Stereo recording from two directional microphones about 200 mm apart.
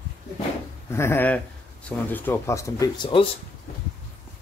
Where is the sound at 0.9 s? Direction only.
10° left (ahead or behind).